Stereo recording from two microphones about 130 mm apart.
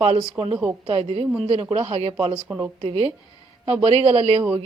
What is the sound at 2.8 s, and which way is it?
A woman's voice, 50° right (ahead or behind).